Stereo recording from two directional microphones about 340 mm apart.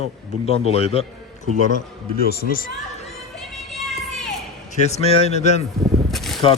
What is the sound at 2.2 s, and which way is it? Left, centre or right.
Speech, left.